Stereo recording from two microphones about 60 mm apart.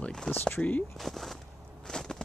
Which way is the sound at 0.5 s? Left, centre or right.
Left.